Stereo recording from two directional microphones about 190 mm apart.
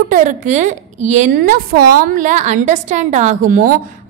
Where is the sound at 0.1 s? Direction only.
40° right (ahead or behind).